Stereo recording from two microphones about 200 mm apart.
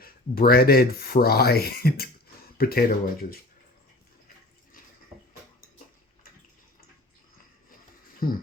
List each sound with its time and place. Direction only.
0.0 s speech: 50° left (ahead or behind)